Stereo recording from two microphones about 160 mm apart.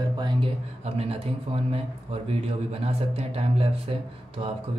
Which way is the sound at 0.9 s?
40° right (ahead or behind).